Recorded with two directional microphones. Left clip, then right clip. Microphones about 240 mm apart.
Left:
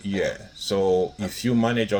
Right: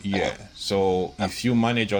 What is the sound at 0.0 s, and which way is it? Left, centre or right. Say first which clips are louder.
Speech: even; right.